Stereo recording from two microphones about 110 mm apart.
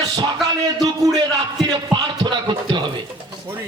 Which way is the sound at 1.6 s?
45° right (ahead or behind).